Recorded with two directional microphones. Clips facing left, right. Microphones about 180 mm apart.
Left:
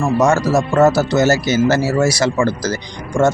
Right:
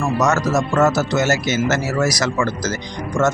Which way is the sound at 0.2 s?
30° left (ahead or behind).